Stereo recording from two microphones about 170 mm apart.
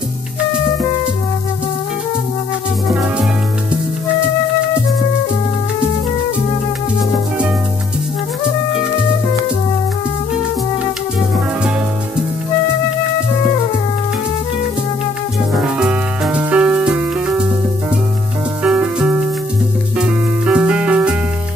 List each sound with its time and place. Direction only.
15.6 s music: 5° right (ahead or behind)
18.6 s music: 5° right (ahead or behind)